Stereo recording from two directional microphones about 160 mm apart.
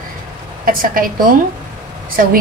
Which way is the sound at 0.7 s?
60° right (ahead or behind).